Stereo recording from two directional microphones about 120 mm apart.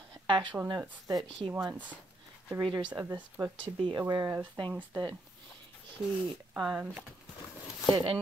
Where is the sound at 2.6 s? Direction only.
40° right (ahead or behind).